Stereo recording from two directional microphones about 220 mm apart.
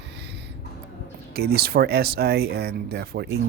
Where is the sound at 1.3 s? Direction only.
45° right (ahead or behind).